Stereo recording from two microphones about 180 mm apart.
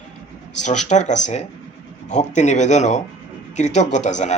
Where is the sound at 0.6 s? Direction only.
40° left (ahead or behind).